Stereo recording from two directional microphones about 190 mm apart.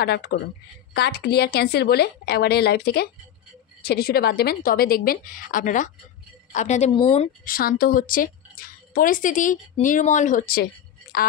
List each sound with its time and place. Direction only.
0.0 s a woman's voice: 60° left (ahead or behind); by 6.9 s 40° left (ahead or behind)
6.9 s speech: 30° left (ahead or behind)
7.4 s a woman's voice: 50° left (ahead or behind)